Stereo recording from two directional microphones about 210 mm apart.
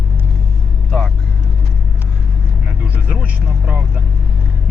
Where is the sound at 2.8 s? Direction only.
5° right (ahead or behind).